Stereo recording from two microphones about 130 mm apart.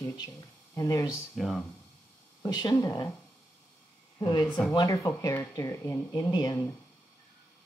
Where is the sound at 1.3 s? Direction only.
Centre (ahead or behind).